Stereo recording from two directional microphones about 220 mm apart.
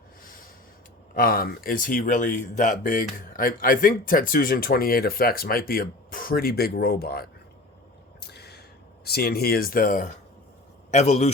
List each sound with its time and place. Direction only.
1.1 s speech: 40° left (ahead or behind)
8.2 s a sound: 45° left (ahead or behind)
9.0 s a man's voice: 45° left (ahead or behind); by 11.3 s 30° left (ahead or behind)